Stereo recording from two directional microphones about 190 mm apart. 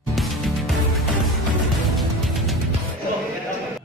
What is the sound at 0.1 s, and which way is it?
Music, centre (ahead or behind).